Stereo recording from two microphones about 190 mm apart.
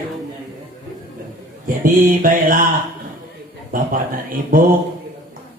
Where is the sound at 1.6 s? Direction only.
45° right (ahead or behind).